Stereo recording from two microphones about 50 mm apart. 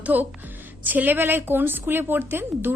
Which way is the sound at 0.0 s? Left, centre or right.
Right.